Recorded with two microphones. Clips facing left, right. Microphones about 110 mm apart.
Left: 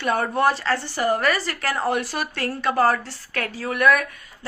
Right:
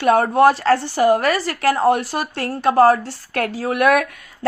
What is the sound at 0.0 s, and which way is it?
A woman's voice, 55° right (ahead or behind).